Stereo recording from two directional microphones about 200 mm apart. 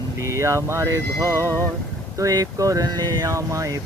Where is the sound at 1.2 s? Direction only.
10° left (ahead or behind).